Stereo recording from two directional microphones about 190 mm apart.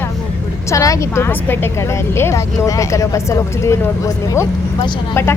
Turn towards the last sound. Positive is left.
turn(degrees=15)  # may be behind; listen again after turning